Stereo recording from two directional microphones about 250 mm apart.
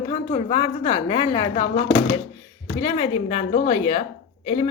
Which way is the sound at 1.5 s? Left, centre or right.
Left.